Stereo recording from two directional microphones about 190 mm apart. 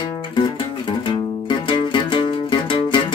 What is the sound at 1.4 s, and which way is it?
Music, 25° left (ahead or behind).